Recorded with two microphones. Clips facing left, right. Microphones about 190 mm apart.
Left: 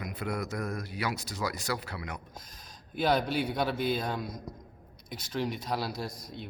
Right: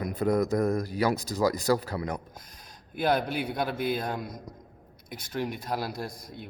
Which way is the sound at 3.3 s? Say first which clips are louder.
Left 1 dB; 55° right (ahead or behind).